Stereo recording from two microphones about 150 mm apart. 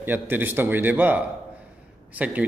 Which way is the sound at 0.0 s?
15° right (ahead or behind).